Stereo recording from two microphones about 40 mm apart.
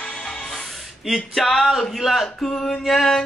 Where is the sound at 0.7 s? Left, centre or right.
Centre.